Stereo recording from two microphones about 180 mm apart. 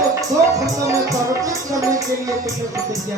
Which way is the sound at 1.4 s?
20° right (ahead or behind).